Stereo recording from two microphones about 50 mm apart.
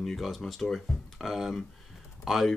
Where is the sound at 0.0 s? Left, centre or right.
Centre.